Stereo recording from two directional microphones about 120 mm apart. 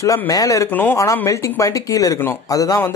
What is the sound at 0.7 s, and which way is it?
Speech, 15° left (ahead or behind).